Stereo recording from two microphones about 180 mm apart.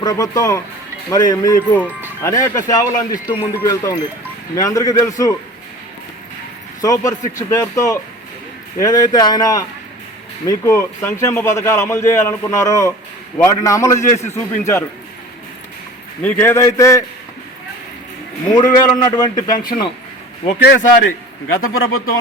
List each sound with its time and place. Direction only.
0.0 s speech: 20° left (ahead or behind)
6.8 s speech: 20° left (ahead or behind)
16.2 s speech: 10° left (ahead or behind)
18.5 s speech: 20° left (ahead or behind)
19.5 s speech: 50° left (ahead or behind)
20.6 s a man's voice: 65° left (ahead or behind)
21.6 s speech: 55° left (ahead or behind)